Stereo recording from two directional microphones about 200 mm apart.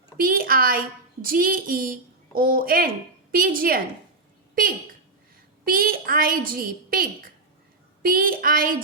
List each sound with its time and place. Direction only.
0.2 s a woman's voice: 45° right (ahead or behind)
5.6 s a woman's voice: 45° right (ahead or behind)